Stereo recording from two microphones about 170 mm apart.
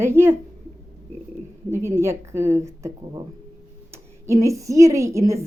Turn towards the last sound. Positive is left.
turn(degrees=-15)  # may be behind; listen again after turning